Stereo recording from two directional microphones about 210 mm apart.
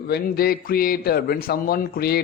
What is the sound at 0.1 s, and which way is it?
A man's voice, 45° left (ahead or behind).